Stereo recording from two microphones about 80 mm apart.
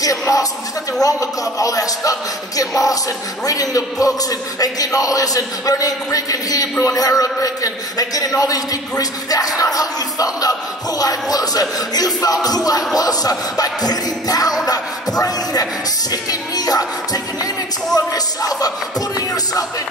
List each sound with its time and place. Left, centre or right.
0.0 s a man's voice: left
14.7 s a sound: left
16.1 s a man's voice: left